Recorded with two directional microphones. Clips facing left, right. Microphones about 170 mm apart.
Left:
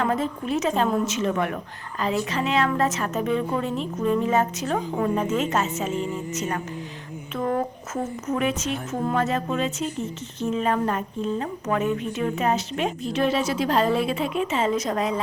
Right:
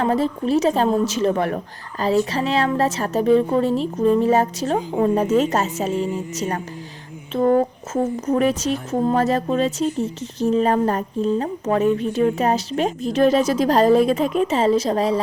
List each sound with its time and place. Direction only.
0.0 s speech: 35° right (ahead or behind)